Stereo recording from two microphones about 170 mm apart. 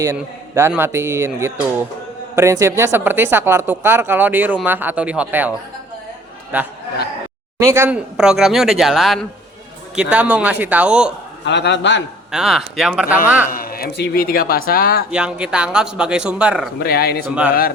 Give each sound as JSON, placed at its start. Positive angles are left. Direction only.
{"t": 0.0, "sound": "speech", "side_deg": -15}
{"t": 11.4, "sound": "a man's voice", "side_deg": 90}
{"t": 12.3, "sound": "speech", "side_deg": 0}
{"t": 13.5, "sound": "speech", "side_deg": 60}
{"t": 15.1, "sound": "speech", "side_deg": -5}
{"t": 16.8, "sound": "speech", "side_deg": 65}